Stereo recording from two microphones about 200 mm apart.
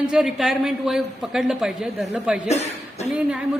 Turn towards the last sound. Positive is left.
turn(degrees=-5)  # may be behind; listen again after turning